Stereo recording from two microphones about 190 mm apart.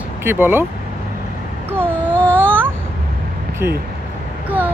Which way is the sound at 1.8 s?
5° left (ahead or behind).